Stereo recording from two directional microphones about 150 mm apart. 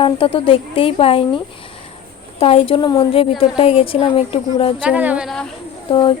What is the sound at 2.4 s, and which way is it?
Speech, 40° left (ahead or behind).